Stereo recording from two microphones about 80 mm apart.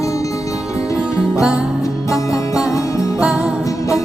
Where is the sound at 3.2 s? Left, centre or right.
Centre.